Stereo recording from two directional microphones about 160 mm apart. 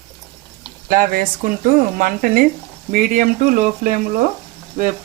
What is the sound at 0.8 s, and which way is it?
Speech, 60° right (ahead or behind).